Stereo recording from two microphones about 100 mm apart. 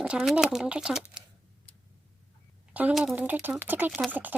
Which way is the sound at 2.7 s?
15° right (ahead or behind).